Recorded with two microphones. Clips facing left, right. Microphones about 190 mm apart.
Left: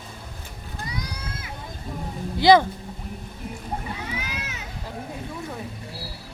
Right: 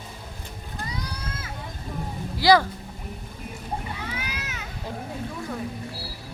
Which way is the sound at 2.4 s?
20° left (ahead or behind).